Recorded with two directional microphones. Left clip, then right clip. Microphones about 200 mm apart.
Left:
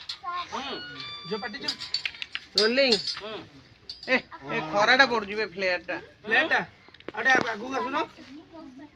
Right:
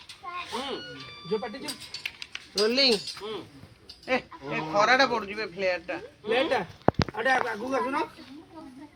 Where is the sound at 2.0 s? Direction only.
40° left (ahead or behind).